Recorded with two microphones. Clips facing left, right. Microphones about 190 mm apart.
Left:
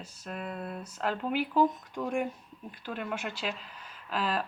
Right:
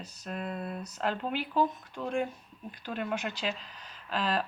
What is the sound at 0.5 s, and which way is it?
Speech, 10° right (ahead or behind).